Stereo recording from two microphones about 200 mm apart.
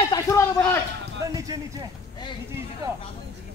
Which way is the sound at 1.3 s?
15° right (ahead or behind).